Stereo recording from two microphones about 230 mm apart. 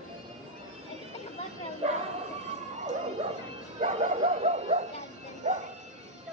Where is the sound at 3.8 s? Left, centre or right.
Right.